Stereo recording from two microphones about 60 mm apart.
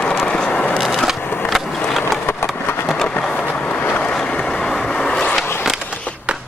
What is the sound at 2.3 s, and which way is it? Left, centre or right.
Vehicle, left.